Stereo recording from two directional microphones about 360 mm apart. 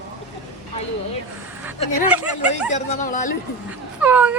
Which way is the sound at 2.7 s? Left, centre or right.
Left.